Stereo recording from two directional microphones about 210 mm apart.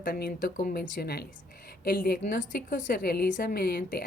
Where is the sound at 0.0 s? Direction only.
45° left (ahead or behind).